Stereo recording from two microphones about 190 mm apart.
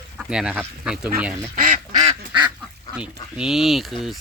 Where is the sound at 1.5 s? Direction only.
45° right (ahead or behind).